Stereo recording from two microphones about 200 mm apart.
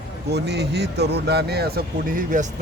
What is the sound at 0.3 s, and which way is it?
Speech, 55° right (ahead or behind).